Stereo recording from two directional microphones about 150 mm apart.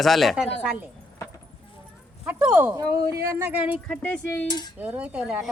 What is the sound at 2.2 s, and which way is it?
Speech, 10° right (ahead or behind).